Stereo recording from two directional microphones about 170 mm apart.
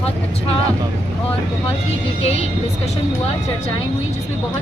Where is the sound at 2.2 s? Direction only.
35° left (ahead or behind).